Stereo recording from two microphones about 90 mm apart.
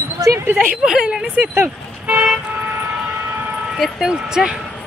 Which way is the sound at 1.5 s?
25° right (ahead or behind).